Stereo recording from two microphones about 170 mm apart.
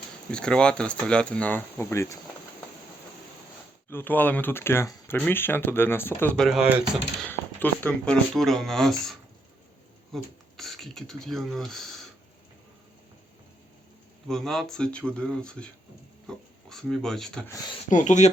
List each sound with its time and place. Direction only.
0.3 s speech: 5° left (ahead or behind)
3.8 s speech: 10° left (ahead or behind)
7.9 s speech: 5° left (ahead or behind)
14.3 s speech: centre (ahead or behind)
17.8 s speech: 45° left (ahead or behind)